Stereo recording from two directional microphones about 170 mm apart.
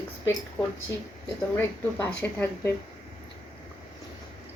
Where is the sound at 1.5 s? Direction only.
15° left (ahead or behind).